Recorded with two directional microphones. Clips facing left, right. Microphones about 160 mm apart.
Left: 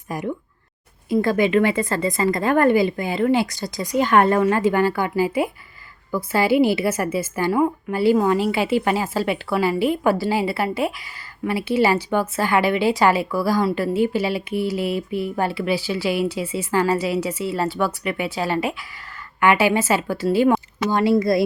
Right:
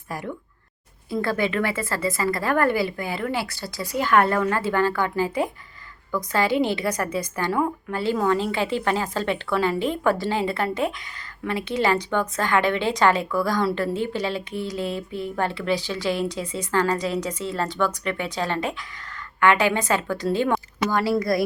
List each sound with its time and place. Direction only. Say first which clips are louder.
0.1 s a woman's voice: left 5 dB; 20° left (ahead or behind)
20.9 s speech: left 5 dB; 20° left (ahead or behind)